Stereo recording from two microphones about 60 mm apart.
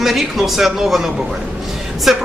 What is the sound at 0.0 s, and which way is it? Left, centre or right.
A man's voice, centre.